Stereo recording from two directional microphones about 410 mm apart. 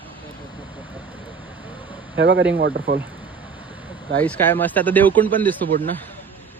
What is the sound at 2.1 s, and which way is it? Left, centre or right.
Speech, right.